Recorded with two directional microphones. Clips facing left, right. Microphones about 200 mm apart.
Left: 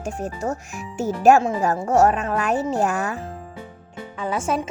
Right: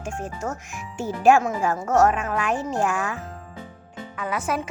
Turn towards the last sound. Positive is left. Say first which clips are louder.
# left 3 dB
turn(degrees=25)  # may be behind; listen again after turning